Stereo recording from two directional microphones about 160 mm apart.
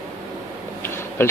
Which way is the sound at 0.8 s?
15° left (ahead or behind).